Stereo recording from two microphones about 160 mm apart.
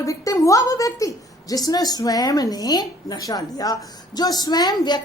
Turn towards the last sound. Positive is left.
turn(degrees=25)  # may be behind; listen again after turning